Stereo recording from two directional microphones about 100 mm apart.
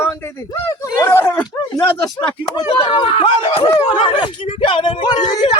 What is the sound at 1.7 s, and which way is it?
Speech, 40° left (ahead or behind).